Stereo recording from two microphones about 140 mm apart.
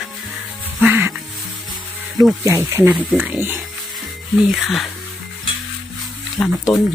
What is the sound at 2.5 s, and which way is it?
Speech, 20° right (ahead or behind).